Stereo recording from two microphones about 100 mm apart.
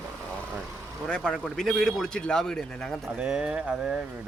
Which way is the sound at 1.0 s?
10° left (ahead or behind).